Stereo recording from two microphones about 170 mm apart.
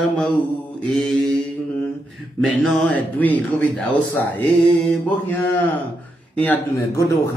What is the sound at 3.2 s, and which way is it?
Mantra, 10° left (ahead or behind).